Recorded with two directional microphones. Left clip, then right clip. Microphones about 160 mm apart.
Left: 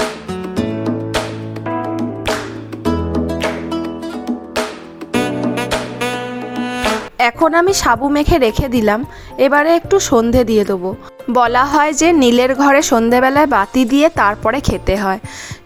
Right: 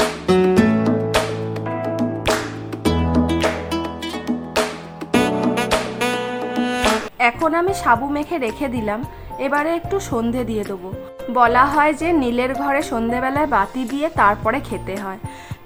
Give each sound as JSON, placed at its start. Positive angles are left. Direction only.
{"t": 0.4, "sound": "music", "side_deg": 0}
{"t": 7.4, "sound": "a woman's voice", "side_deg": 40}
{"t": 11.3, "sound": "a woman's voice", "side_deg": 50}